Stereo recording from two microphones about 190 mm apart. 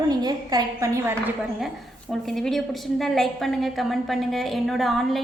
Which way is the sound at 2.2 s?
Centre (ahead or behind).